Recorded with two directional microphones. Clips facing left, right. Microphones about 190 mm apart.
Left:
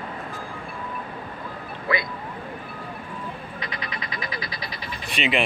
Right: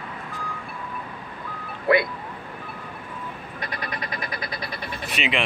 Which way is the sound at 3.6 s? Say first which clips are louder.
Right 5 dB; 55° right (ahead or behind).